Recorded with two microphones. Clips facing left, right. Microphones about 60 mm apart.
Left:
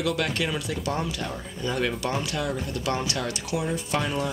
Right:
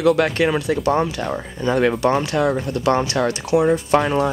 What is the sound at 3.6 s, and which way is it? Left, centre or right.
Speech, right.